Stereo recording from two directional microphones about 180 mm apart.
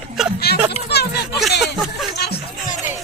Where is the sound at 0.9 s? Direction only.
65° left (ahead or behind).